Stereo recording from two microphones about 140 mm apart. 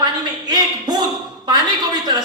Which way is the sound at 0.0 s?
30° right (ahead or behind).